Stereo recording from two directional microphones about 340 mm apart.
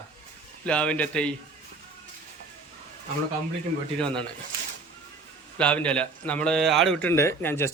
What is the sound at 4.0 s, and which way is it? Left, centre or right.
Speech, centre.